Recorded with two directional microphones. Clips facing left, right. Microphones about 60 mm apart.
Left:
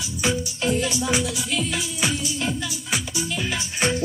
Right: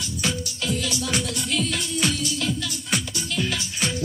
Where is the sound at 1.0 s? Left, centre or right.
Centre.